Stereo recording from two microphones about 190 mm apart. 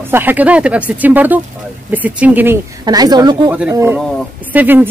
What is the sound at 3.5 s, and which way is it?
Speech, 10° right (ahead or behind).